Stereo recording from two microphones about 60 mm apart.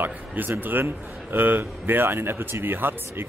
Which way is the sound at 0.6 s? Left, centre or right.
Right.